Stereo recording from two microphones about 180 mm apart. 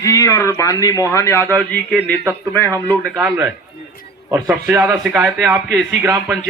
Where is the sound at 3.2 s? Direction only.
10° right (ahead or behind).